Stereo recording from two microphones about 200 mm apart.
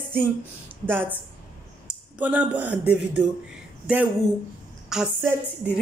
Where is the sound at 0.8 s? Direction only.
10° right (ahead or behind).